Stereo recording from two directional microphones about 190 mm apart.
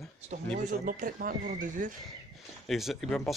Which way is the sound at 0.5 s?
45° right (ahead or behind).